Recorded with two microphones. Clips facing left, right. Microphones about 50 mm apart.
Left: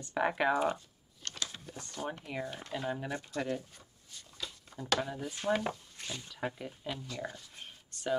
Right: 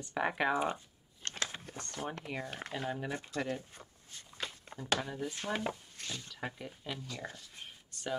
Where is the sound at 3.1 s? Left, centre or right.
Right.